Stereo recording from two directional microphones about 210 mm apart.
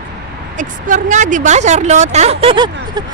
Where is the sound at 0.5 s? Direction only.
35° right (ahead or behind).